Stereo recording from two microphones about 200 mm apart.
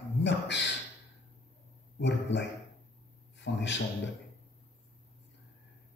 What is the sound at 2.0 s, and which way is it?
Speech, 60° left (ahead or behind).